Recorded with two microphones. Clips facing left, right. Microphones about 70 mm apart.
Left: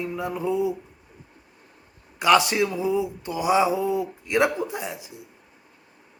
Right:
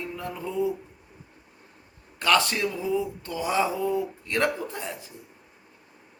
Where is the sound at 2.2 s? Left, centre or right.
Centre.